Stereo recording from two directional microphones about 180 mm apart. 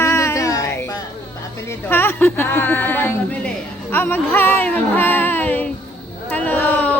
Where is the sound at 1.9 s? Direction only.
10° left (ahead or behind).